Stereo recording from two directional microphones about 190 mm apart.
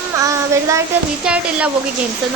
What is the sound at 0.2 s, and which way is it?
Child singing, 15° right (ahead or behind).